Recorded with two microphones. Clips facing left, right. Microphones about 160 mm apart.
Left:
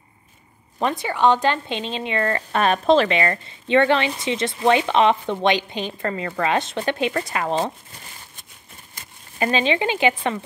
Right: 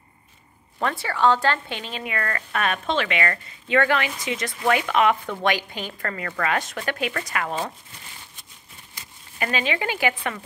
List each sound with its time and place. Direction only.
0.7 s speech: 20° left (ahead or behind)
9.0 s crumpling: 45° left (ahead or behind)
9.4 s speech: 30° left (ahead or behind)